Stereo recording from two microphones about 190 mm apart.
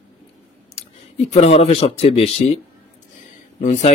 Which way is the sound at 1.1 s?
35° left (ahead or behind).